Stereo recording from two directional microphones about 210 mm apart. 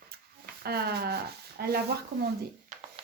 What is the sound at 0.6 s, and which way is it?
Speech, 50° right (ahead or behind).